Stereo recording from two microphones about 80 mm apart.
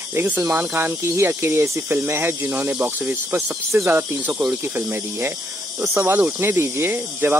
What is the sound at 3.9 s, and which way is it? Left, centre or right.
Speech, right.